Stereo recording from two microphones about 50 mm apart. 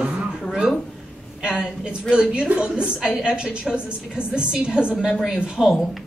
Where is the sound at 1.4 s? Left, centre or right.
Centre.